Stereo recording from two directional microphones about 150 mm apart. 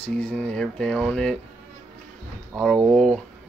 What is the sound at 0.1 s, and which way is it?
Speech, 5° left (ahead or behind).